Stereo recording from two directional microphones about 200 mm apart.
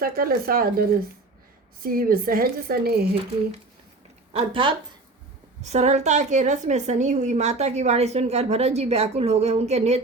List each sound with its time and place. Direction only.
0.0 s a woman's voice: 45° right (ahead or behind)
4.3 s a woman's voice: 25° right (ahead or behind)